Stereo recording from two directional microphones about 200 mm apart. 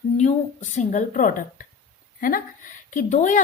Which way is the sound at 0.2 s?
35° left (ahead or behind).